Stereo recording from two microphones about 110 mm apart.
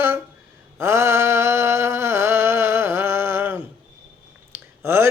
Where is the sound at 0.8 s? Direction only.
25° right (ahead or behind).